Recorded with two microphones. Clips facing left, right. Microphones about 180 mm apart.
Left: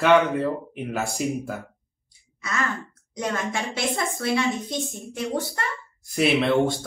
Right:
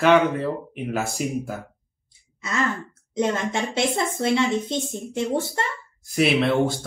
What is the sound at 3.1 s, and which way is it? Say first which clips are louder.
A woman's voice: right 4 dB; 25° right (ahead or behind).